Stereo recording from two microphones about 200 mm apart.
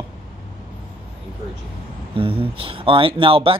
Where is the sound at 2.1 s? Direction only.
25° right (ahead or behind).